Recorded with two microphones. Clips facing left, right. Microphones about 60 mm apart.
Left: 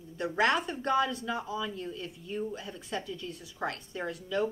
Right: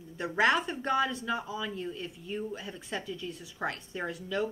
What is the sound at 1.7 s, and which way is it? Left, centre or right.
Speech, right.